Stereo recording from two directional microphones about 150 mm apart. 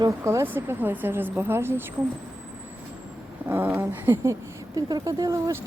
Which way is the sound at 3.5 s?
15° right (ahead or behind).